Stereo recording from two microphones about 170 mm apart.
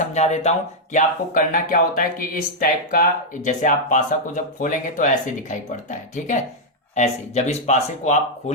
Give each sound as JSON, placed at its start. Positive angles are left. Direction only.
{"t": 0.1, "sound": "speech", "side_deg": 40}
{"t": 0.9, "sound": "speech", "side_deg": 55}